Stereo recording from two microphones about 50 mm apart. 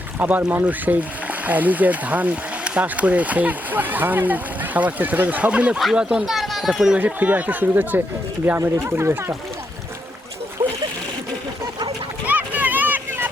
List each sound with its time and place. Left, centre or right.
0.2 s speech: right; by 6.2 s centre
6.2 s a child's voice: centre
7.0 s speech: right
8.5 s speech: right
10.6 s splash: right
12.2 s a sound: right
13.1 s vehicle: right